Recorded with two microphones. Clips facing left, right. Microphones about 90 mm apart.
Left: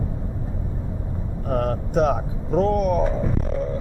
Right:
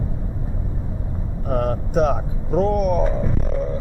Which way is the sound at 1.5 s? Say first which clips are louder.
Right 1 dB; 10° right (ahead or behind).